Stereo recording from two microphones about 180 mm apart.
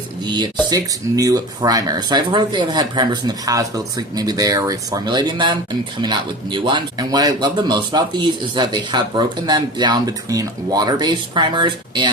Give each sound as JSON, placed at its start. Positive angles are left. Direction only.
{"t": 0.7, "sound": "speech", "side_deg": -20}